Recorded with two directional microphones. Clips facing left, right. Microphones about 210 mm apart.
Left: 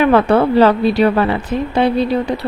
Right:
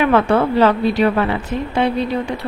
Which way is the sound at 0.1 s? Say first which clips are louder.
Left 3 dB; 35° left (ahead or behind).